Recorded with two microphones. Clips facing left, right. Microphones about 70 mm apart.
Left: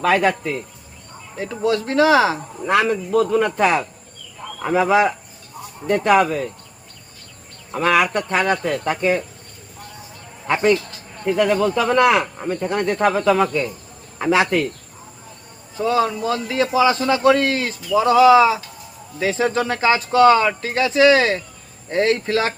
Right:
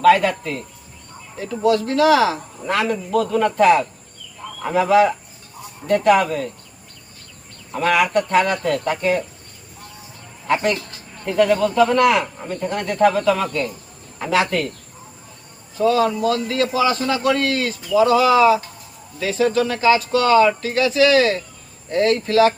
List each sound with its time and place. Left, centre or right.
0.1 s speech: left
1.4 s speech: left
7.8 s speech: left
10.4 s speech: left
15.8 s a man's voice: left